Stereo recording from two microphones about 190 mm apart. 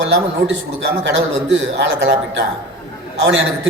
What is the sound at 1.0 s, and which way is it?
A man's voice, 70° right (ahead or behind).